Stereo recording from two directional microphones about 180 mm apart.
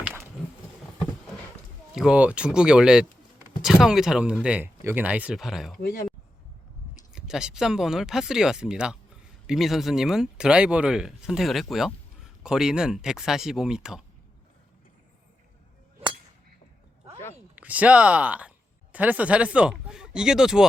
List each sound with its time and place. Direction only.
1.9 s speech: 5° right (ahead or behind)
5.8 s speech: 50° left (ahead or behind)
7.1 s speech: 5° right (ahead or behind)
17.5 s speech: 10° right (ahead or behind)